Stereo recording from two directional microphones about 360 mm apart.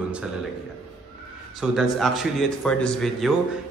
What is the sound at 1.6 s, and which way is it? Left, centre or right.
A man's voice, centre.